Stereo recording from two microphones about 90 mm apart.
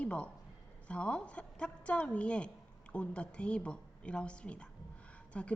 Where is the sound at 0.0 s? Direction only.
10° left (ahead or behind).